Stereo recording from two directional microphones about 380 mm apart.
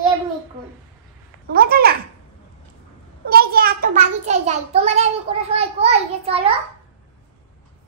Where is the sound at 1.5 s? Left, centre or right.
Right.